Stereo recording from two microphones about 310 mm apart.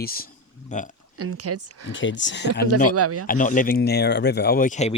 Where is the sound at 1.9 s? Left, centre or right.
Left.